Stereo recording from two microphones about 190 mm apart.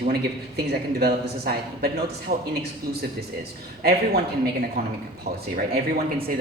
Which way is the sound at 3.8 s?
55° right (ahead or behind).